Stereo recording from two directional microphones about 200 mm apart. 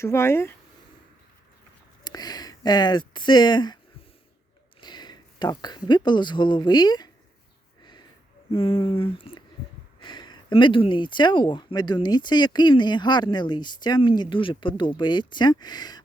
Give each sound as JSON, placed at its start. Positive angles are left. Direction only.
{"t": 0.0, "sound": "speech", "side_deg": 15}
{"t": 2.0, "sound": "speech", "side_deg": 20}
{"t": 4.8, "sound": "speech", "side_deg": 20}
{"t": 8.5, "sound": "speech", "side_deg": 30}